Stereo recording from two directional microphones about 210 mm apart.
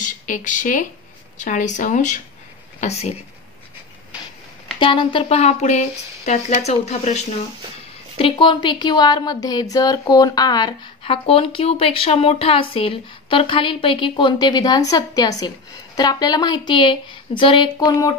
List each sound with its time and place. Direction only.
0.0 s speech: 35° left (ahead or behind)
4.7 s a woman's voice: 25° left (ahead or behind)